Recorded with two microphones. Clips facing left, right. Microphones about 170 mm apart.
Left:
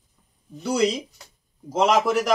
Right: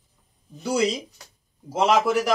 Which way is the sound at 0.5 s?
5° right (ahead or behind).